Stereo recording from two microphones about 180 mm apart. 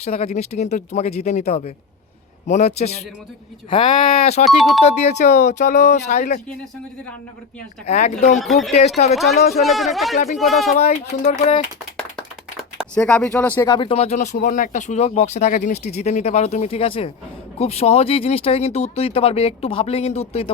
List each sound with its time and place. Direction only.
0.0 s speech: 35° left (ahead or behind)
4.4 s speech: centre (ahead or behind)
4.8 s speech: 35° left (ahead or behind)
7.9 s speech: 35° left (ahead or behind)
8.4 s speech: centre (ahead or behind)
10.8 s speech: 35° left (ahead or behind)
12.9 s speech: 5° left (ahead or behind)
13.6 s speech: 25° left (ahead or behind)